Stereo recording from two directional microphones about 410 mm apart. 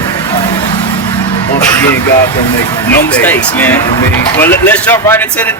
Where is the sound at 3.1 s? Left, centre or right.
Centre.